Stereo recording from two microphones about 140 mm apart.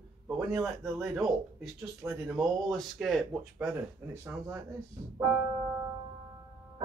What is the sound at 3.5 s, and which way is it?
Speech, 15° right (ahead or behind).